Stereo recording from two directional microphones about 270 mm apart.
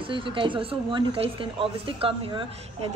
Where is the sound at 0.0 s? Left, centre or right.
Centre.